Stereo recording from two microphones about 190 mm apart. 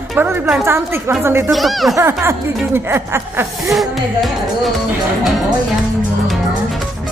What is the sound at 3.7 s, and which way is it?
Speech, centre (ahead or behind).